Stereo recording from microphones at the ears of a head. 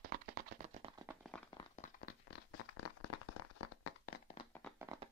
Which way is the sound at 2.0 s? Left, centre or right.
Left.